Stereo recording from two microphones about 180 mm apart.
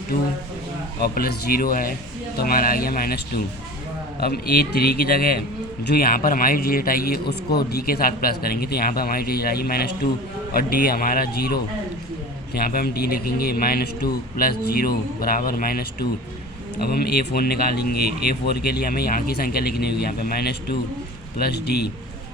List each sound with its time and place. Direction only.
1.0 s a man's voice: 55° left (ahead or behind)